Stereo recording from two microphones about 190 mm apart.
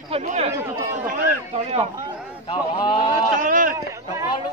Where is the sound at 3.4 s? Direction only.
45° right (ahead or behind).